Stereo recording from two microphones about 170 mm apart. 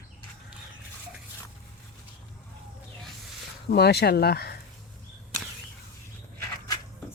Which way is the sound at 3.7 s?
70° left (ahead or behind).